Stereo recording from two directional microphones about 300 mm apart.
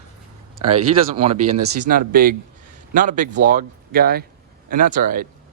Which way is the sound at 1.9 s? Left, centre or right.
Right.